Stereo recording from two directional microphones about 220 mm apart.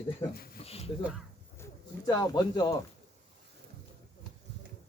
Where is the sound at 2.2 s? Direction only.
20° left (ahead or behind).